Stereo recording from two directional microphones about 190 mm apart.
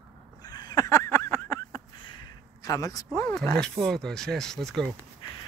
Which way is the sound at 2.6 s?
20° left (ahead or behind).